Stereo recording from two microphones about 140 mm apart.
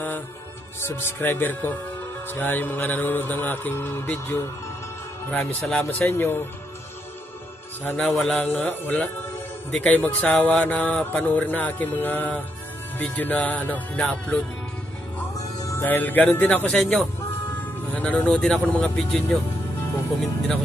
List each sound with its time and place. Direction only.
0.7 s speech: 15° left (ahead or behind)
7.9 s speech: centre (ahead or behind)
8.5 s speech: 15° left (ahead or behind)